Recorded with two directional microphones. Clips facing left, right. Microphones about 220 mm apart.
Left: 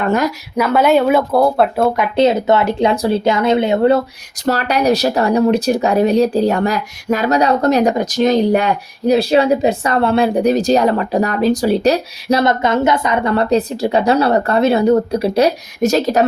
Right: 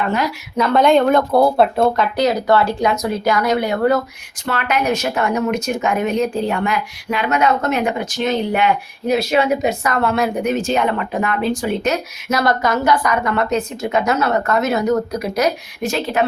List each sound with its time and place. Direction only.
0.0 s speech: 45° left (ahead or behind)
0.5 s speech: 10° left (ahead or behind)
2.1 s speech: 25° left (ahead or behind)
4.4 s speech: 35° left (ahead or behind)